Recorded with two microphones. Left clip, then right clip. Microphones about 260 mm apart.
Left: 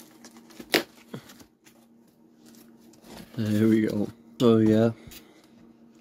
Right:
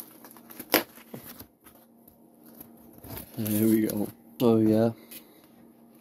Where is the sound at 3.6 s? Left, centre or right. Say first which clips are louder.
Left 2 dB; centre.